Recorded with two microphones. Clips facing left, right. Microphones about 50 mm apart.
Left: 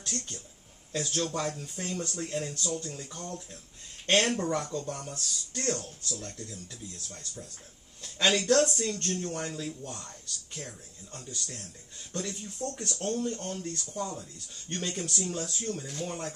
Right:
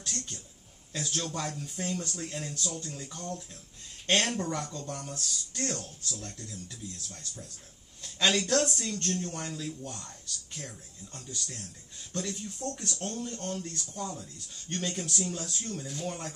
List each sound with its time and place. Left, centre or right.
0.0 s speech: centre
8.0 s speech: centre